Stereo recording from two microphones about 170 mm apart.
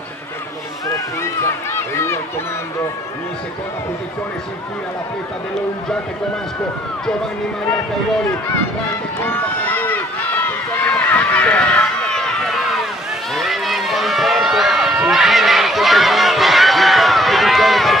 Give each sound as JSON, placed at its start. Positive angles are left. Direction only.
{"t": 0.9, "sound": "run", "side_deg": 15}
{"t": 9.2, "sound": "run", "side_deg": 10}